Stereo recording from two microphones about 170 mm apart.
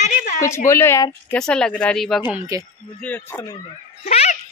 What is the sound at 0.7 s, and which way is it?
Speech, 15° left (ahead or behind).